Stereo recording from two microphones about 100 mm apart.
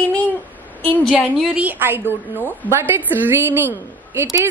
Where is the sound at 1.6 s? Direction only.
20° right (ahead or behind).